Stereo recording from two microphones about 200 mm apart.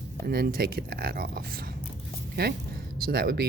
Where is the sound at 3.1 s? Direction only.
50° right (ahead or behind).